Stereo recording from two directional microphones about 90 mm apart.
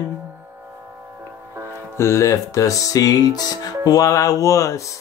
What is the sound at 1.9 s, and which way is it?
Music, 30° left (ahead or behind).